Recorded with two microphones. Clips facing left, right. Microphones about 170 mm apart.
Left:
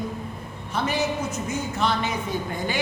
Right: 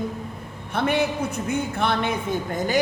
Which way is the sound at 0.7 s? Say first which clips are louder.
Right 3 dB; 60° right (ahead or behind).